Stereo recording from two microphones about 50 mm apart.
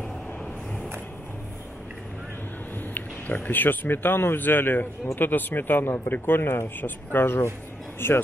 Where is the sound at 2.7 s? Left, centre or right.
Left.